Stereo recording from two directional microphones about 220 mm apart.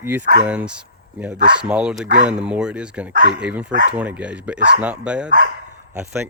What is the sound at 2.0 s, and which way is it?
Speech, 35° right (ahead or behind).